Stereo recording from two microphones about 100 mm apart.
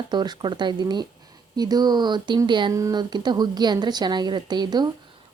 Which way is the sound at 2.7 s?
35° right (ahead or behind).